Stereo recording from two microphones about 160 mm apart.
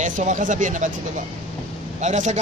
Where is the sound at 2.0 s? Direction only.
45° right (ahead or behind).